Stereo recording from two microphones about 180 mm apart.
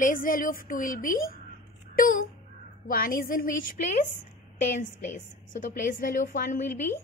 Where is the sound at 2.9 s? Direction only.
50° left (ahead or behind).